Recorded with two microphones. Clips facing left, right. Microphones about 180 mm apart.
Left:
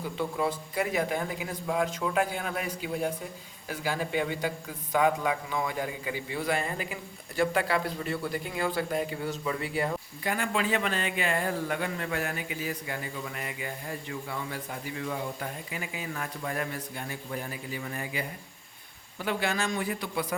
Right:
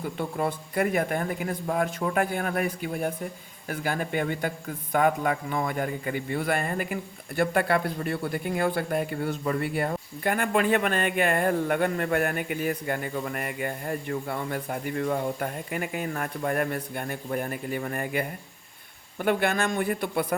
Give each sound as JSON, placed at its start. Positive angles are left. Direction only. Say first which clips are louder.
{"t": 0.2, "sound": "a man's voice", "louder": "even", "side_deg": -55}